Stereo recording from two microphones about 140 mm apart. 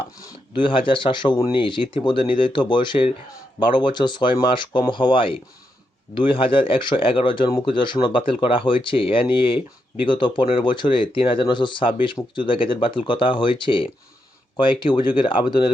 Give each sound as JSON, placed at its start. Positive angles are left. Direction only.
{"t": 0.5, "sound": "speech", "side_deg": 35}